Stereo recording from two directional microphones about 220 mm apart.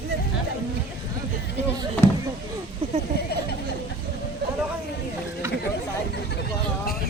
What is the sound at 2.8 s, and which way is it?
Speech, 25° right (ahead or behind).